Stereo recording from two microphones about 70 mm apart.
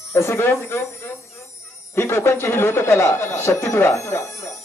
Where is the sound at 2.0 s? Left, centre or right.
Left.